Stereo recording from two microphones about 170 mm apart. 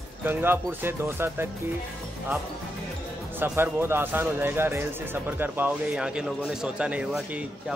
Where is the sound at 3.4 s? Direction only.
15° right (ahead or behind).